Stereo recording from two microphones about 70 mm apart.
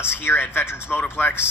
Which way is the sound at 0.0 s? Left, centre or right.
Left.